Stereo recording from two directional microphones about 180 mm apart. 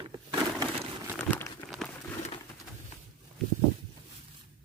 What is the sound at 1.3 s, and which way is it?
Crumpling, 10° left (ahead or behind).